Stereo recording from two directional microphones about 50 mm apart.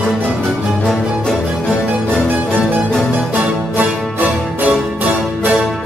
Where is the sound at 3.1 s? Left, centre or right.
Right.